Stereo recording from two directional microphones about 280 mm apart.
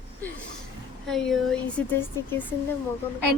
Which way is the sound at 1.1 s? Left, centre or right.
Centre.